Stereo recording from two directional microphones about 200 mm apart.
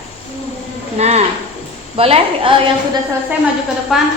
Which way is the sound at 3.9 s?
Centre (ahead or behind).